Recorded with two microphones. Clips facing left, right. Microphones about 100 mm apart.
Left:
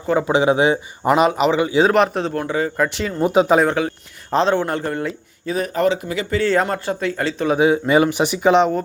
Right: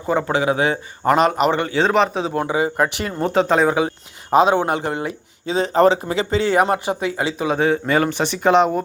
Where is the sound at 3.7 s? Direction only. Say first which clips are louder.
Right 1 dB; 20° right (ahead or behind).